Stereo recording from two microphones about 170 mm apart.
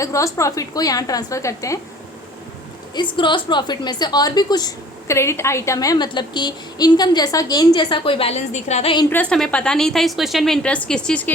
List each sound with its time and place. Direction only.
0.0 s a woman's voice: 20° left (ahead or behind)
2.9 s a woman's voice: 25° left (ahead or behind)
9.0 s a woman's voice: 10° left (ahead or behind)